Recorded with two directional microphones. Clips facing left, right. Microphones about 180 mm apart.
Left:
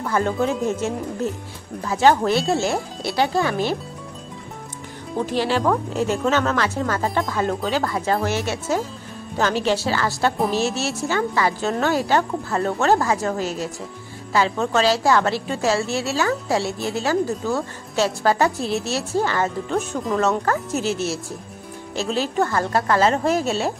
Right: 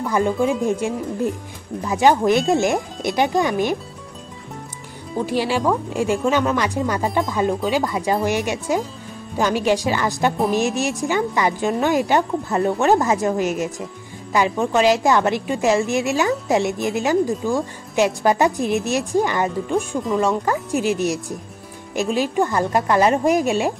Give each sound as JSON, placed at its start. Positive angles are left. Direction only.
{"t": 0.0, "sound": "a woman's voice", "side_deg": -10}
{"t": 5.1, "sound": "a woman's voice", "side_deg": -10}